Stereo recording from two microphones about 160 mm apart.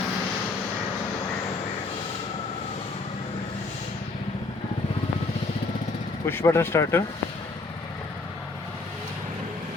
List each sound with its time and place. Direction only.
6.2 s speech: 15° left (ahead or behind)